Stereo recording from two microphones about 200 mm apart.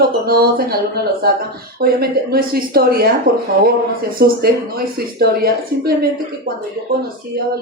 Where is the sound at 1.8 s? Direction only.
50° right (ahead or behind).